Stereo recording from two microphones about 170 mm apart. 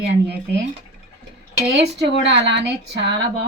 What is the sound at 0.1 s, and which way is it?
Speech, 90° right.